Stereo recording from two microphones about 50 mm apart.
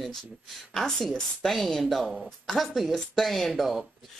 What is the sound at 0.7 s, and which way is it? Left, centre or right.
A woman's voice, centre.